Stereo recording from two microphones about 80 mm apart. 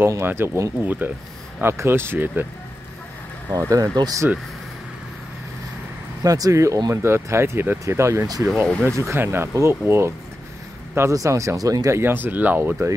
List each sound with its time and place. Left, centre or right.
0.2 s speech: right
3.5 s speech: right
3.9 s speech: right
6.2 s speech: right
6.9 s speech: right
8.3 s speech: right
8.8 s speech: right
11.9 s speech: right